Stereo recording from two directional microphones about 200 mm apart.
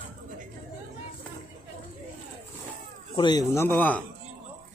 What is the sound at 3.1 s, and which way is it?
Speech, 20° left (ahead or behind).